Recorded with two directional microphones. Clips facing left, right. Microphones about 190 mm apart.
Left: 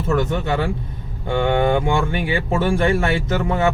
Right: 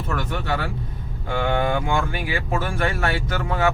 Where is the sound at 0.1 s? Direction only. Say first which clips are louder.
Left 7 dB; 20° left (ahead or behind).